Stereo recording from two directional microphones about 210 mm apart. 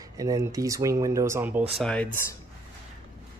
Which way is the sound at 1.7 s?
5° left (ahead or behind).